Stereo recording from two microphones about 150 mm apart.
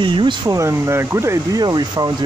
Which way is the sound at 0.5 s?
20° right (ahead or behind).